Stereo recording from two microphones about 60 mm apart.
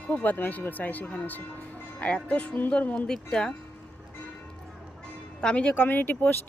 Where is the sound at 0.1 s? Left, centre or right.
Left.